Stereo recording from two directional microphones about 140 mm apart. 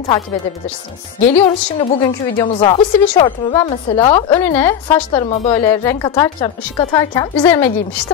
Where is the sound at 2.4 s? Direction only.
35° left (ahead or behind).